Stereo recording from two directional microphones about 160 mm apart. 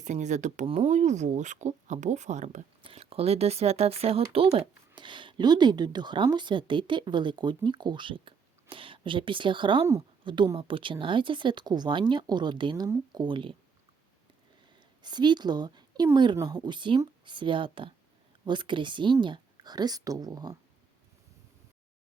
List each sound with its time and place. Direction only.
0.0 s speech: 50° right (ahead or behind)
2.8 s speech: 35° right (ahead or behind)
15.0 s a woman's voice: 30° right (ahead or behind)